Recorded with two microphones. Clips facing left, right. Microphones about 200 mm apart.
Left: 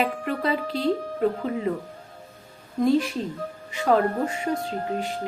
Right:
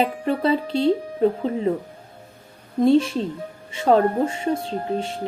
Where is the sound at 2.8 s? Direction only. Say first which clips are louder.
Right 4 dB; 25° right (ahead or behind).